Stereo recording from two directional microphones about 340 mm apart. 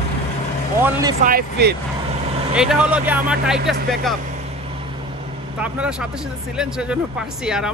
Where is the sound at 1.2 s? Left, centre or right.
Right.